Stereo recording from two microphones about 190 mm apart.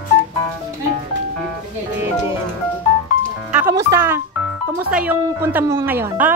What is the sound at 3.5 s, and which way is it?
Speech, 15° right (ahead or behind).